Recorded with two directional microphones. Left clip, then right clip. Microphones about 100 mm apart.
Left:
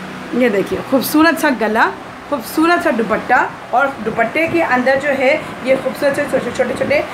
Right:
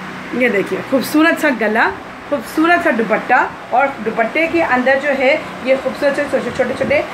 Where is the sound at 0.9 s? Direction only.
15° left (ahead or behind).